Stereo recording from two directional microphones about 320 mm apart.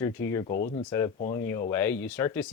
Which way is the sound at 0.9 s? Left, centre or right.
Centre.